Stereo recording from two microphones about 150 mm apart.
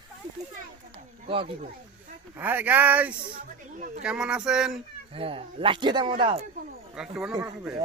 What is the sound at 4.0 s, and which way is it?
Speech, 5° right (ahead or behind).